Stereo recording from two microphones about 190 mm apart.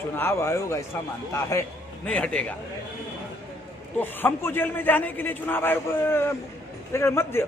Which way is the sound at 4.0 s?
10° left (ahead or behind).